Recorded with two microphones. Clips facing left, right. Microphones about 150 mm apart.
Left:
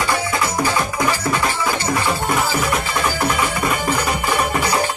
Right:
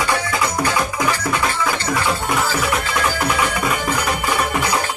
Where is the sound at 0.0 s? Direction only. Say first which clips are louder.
Even; 5° left (ahead or behind).